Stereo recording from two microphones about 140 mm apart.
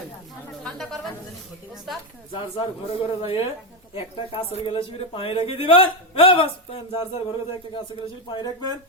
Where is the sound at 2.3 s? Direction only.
40° left (ahead or behind).